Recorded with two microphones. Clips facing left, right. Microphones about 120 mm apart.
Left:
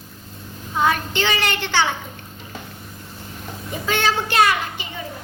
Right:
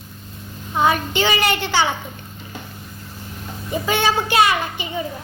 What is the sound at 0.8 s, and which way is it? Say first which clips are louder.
A child's voice: right 2 dB; 10° right (ahead or behind).